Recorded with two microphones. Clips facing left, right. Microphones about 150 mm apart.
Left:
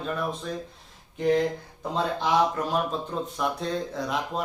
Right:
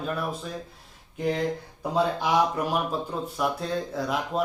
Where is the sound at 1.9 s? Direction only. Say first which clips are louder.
Right 1 dB; 10° right (ahead or behind).